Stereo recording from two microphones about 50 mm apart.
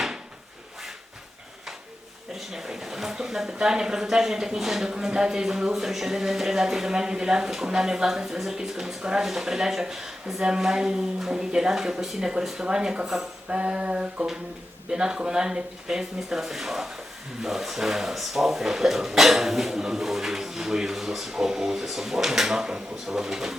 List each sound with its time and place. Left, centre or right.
2.3 s speech: centre
13.5 s a sound: right
14.8 s speech: centre